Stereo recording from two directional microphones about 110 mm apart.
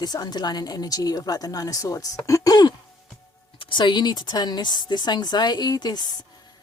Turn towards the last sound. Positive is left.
turn(degrees=40)  # may be behind; listen again after turning